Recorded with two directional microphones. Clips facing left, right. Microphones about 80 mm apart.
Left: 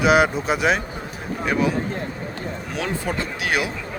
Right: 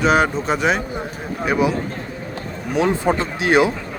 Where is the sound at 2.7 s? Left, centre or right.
Right.